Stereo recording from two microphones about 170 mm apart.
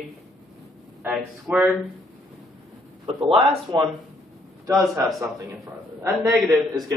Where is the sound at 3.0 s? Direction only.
35° right (ahead or behind).